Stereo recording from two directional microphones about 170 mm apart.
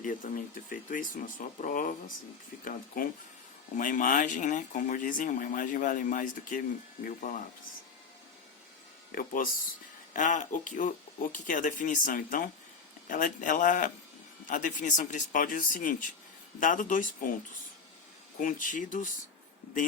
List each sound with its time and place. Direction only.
0.0 s speech: 50° left (ahead or behind)
9.1 s speech: 55° left (ahead or behind)
18.3 s speech: 50° left (ahead or behind)